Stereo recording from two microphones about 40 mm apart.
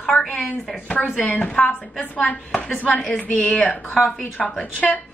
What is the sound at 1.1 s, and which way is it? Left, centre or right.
A woman's voice, left.